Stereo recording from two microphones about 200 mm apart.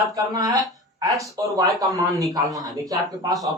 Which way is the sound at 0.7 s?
20° right (ahead or behind).